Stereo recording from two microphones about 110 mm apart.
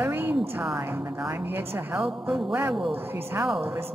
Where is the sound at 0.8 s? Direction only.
20° right (ahead or behind).